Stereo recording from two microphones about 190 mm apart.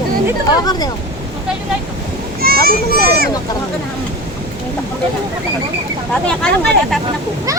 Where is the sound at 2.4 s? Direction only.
55° right (ahead or behind).